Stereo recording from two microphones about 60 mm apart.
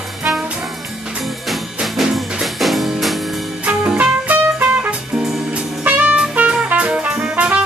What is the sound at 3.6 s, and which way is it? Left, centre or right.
Music, centre.